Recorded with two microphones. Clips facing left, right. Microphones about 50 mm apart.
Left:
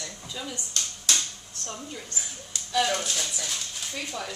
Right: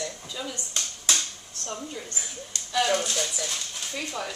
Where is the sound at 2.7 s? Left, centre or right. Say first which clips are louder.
Right 1 dB; centre.